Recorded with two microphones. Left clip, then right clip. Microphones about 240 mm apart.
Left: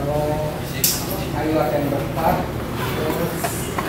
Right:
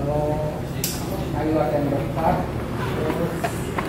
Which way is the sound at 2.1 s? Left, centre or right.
Centre.